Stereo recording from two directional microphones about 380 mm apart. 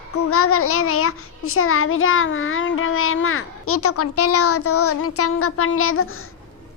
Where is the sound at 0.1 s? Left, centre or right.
Left.